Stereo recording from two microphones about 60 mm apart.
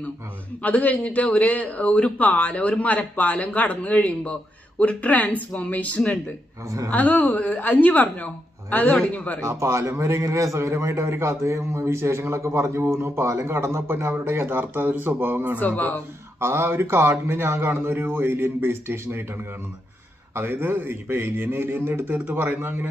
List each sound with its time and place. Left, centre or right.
0.6 s a man's voice: left
9.4 s a man's voice: right
15.6 s a man's voice: left
16.3 s a man's voice: right